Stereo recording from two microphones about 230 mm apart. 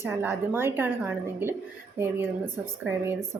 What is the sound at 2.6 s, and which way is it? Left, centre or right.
Speech, centre.